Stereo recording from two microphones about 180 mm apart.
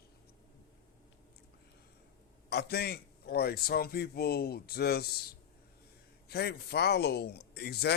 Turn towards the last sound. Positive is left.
turn(degrees=65)  # may be behind; listen again after turning